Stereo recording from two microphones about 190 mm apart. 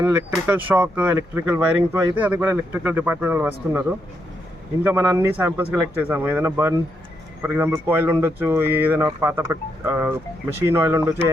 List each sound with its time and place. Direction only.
0.0 s speech: 10° right (ahead or behind)